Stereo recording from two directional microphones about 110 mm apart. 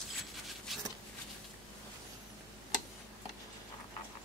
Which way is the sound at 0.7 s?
Centre (ahead or behind).